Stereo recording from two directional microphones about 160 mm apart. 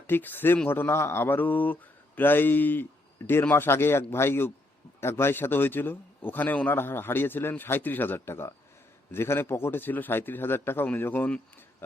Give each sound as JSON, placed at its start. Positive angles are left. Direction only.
{"t": 0.1, "sound": "a man's voice", "side_deg": 10}